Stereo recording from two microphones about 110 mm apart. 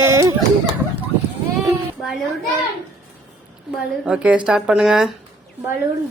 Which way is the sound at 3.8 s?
10° right (ahead or behind).